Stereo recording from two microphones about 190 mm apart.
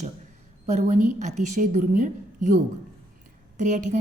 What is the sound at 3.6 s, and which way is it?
Speech, 40° right (ahead or behind).